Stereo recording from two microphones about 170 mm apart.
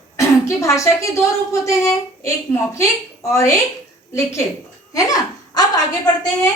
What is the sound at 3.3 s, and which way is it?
Speech, 15° left (ahead or behind).